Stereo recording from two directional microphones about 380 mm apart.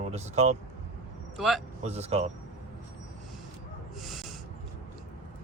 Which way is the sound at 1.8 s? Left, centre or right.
Centre.